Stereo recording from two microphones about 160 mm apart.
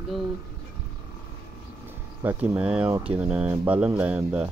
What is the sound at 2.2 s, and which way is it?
Speech, 15° right (ahead or behind).